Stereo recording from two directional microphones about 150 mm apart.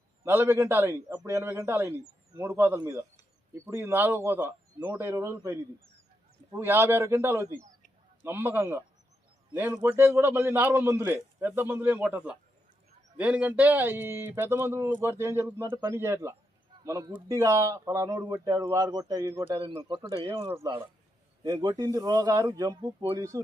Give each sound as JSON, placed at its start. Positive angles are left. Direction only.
{"t": 0.2, "sound": "a man's voice", "side_deg": -15}
{"t": 19.3, "sound": "a man's voice", "side_deg": -15}
{"t": 19.6, "sound": "speech", "side_deg": -35}